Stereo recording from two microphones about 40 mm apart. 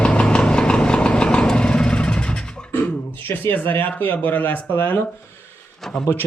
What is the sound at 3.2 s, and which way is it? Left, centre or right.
Speech, left.